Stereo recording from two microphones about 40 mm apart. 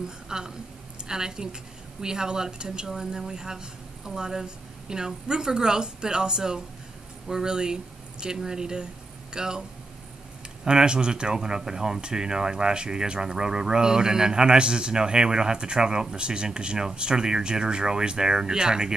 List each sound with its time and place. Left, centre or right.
0.3 s a woman's voice: centre